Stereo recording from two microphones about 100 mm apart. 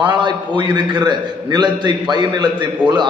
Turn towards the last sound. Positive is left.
turn(degrees=-45)  # may be behind; listen again after turning